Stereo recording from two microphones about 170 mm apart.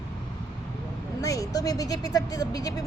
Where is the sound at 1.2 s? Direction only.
20° left (ahead or behind).